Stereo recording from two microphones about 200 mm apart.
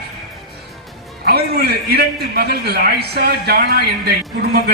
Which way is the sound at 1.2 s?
55° right (ahead or behind).